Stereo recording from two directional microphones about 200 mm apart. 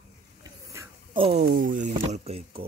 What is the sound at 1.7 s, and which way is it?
Speech, 40° right (ahead or behind).